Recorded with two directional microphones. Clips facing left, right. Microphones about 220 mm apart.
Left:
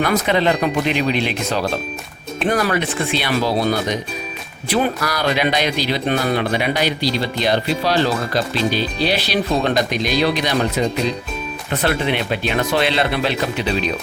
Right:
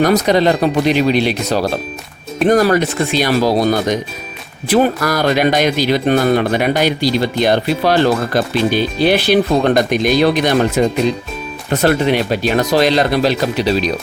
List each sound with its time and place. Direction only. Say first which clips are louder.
0.0 s speech: right 5 dB; 40° right (ahead or behind)